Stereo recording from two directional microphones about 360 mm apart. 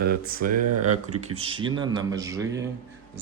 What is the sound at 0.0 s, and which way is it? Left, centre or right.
Speech, right.